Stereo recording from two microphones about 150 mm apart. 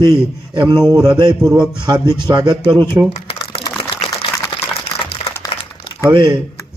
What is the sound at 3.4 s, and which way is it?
Typing, 25° left (ahead or behind).